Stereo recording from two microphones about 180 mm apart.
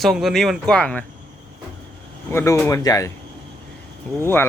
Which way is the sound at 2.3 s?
15° left (ahead or behind).